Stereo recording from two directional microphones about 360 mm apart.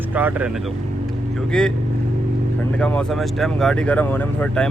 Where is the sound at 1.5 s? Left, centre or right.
Centre.